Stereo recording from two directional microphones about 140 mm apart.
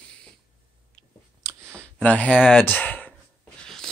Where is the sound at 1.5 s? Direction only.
15° right (ahead or behind).